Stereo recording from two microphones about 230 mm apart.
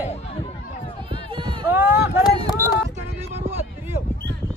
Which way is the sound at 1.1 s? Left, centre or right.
Right.